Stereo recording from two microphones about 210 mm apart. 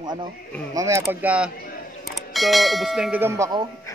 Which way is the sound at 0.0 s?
20° right (ahead or behind).